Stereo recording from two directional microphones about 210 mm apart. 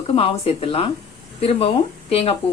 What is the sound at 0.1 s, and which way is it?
Speech, 30° left (ahead or behind).